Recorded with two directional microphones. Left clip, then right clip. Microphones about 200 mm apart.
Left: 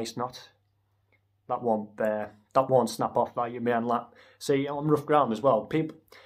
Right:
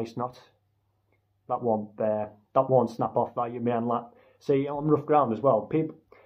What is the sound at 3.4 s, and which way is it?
Speech, centre (ahead or behind).